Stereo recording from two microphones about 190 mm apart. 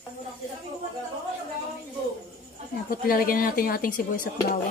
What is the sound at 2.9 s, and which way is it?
Speech, 50° left (ahead or behind).